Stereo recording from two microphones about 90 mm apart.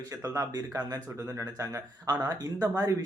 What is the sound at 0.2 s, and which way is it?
Speech, 35° right (ahead or behind).